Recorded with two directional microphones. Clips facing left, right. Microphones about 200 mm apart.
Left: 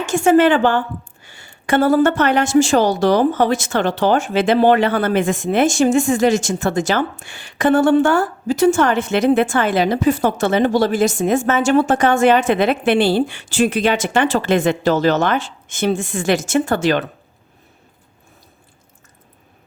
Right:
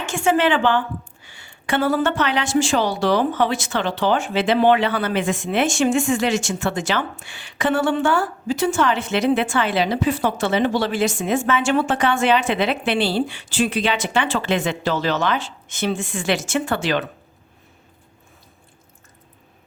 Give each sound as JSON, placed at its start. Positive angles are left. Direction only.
{"t": 0.0, "sound": "a woman's voice", "side_deg": 40}